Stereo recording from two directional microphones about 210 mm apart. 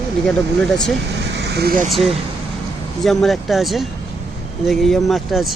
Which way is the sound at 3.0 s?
Centre (ahead or behind).